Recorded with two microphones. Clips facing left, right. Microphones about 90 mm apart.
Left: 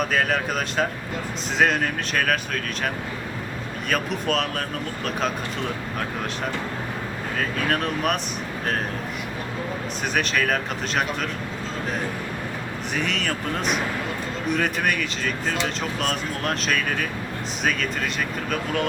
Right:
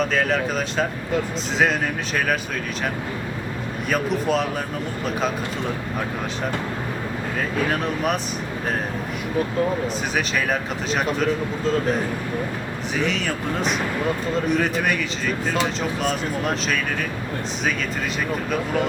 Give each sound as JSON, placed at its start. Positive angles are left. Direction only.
{"t": 0.0, "sound": "speech", "side_deg": 5}
{"t": 3.8, "sound": "speech", "side_deg": -5}
{"t": 7.7, "sound": "speech", "side_deg": 0}
{"t": 10.2, "sound": "speech", "side_deg": -5}
{"t": 13.0, "sound": "speech", "side_deg": 0}
{"t": 16.0, "sound": "speech", "side_deg": 0}